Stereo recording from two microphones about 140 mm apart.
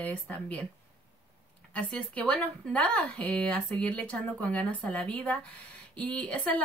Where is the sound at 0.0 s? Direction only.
10° left (ahead or behind).